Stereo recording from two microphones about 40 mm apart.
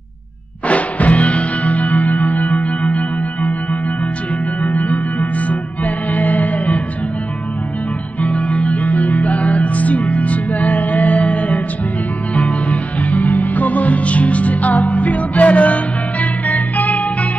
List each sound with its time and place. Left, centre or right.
0.7 s music: left
4.6 s music: left
6.1 s music: left
8.2 s music: left